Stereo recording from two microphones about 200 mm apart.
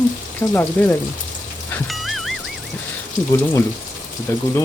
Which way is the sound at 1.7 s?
Centre (ahead or behind).